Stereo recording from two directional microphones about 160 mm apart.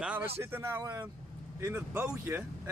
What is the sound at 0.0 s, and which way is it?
Speech, 10° right (ahead or behind).